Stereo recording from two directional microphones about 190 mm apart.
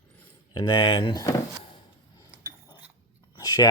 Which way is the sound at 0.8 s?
25° left (ahead or behind).